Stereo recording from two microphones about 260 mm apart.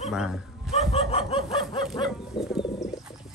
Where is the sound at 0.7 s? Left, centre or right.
Left.